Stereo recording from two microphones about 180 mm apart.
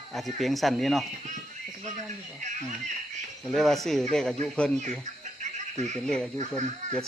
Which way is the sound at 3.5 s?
Centre (ahead or behind).